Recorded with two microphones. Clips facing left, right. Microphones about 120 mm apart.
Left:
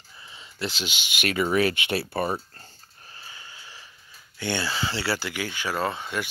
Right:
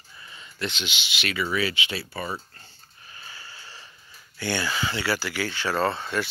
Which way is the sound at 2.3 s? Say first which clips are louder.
Left 3 dB; 40° left (ahead or behind).